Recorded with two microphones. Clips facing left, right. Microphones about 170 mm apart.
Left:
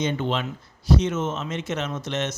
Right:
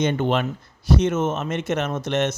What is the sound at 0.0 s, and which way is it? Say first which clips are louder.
Speech: right 4 dB; 60° right (ahead or behind).